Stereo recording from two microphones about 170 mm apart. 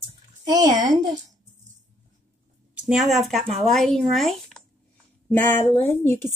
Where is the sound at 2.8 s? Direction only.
Centre (ahead or behind).